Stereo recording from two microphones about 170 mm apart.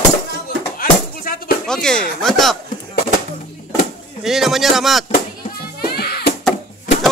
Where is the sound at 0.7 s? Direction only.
55° left (ahead or behind).